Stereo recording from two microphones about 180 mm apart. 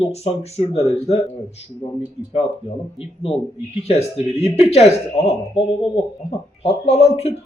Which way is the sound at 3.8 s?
35° left (ahead or behind).